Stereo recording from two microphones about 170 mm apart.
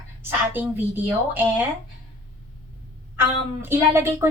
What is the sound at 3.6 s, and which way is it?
Speech, 15° right (ahead or behind).